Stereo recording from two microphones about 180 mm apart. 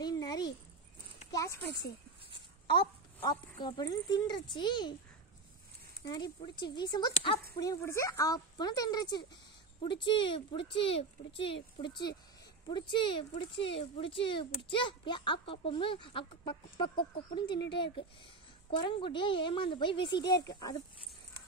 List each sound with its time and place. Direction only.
0.0 s babbling: 20° left (ahead or behind)
1.3 s a child's voice: 15° left (ahead or behind)
2.6 s speech: 30° left (ahead or behind)
6.0 s speech: 25° left (ahead or behind)
12.6 s speech: 25° left (ahead or behind)